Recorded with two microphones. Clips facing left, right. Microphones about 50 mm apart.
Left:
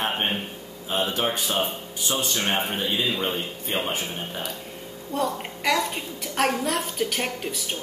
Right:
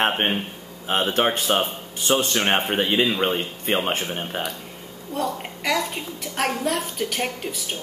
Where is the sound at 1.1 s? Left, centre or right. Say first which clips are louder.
Right 5 dB; right.